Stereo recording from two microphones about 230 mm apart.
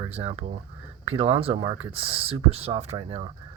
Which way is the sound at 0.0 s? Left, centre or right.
Right.